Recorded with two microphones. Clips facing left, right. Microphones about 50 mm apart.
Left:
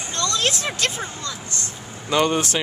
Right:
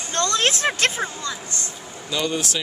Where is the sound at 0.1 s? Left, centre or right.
Right.